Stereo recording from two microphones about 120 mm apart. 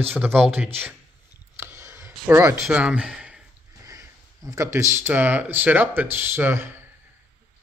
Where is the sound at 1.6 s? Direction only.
20° right (ahead or behind).